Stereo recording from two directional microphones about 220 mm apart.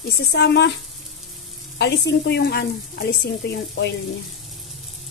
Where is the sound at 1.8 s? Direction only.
50° left (ahead or behind).